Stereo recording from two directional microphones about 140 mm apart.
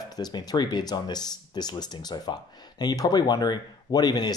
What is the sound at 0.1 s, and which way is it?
Speech, 30° left (ahead or behind).